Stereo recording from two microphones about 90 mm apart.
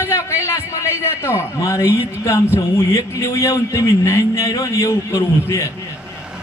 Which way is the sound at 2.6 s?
35° left (ahead or behind).